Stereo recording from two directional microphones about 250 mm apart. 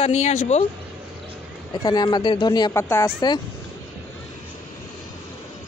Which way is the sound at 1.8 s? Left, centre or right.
Centre.